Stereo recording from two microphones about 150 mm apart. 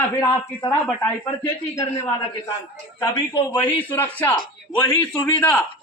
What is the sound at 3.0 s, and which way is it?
Speech, 30° left (ahead or behind).